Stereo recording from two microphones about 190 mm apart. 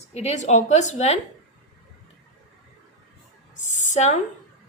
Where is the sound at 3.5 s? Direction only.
40° left (ahead or behind).